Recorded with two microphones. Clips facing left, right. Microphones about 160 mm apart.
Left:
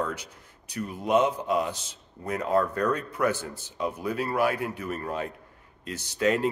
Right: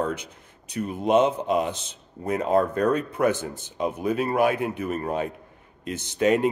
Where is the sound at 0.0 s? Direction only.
20° right (ahead or behind).